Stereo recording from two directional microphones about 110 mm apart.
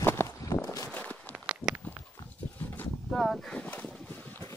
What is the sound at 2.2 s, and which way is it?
Dog, 15° left (ahead or behind).